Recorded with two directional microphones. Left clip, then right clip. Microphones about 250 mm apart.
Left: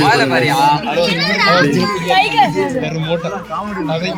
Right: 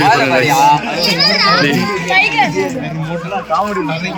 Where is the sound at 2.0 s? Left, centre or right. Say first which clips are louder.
Even; left.